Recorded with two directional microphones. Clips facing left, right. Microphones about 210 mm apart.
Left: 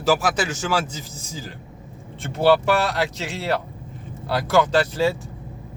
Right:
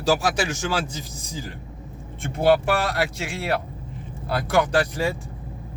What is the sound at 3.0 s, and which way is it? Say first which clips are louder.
Speech: left 1 dB; 10° right (ahead or behind).